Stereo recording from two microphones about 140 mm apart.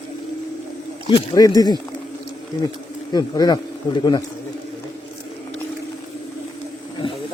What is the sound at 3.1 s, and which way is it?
Speech, 30° left (ahead or behind).